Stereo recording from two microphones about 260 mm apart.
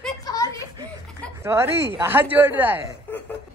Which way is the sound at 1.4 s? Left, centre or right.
Centre.